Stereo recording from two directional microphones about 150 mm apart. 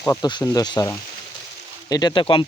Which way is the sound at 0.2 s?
30° left (ahead or behind).